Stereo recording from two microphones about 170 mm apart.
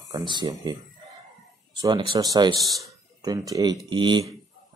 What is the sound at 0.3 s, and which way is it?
Speech, 25° right (ahead or behind).